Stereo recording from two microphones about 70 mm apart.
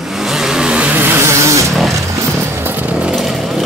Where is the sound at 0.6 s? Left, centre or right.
Centre.